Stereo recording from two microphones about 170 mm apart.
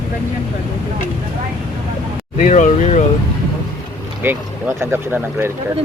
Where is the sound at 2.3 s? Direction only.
50° left (ahead or behind).